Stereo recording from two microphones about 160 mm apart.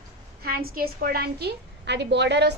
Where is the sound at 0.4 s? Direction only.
70° right (ahead or behind).